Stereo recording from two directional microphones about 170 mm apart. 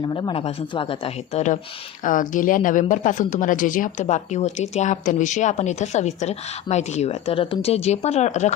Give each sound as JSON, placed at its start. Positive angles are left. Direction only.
{"t": 0.0, "sound": "speech", "side_deg": 25}
{"t": 2.0, "sound": "speech", "side_deg": 50}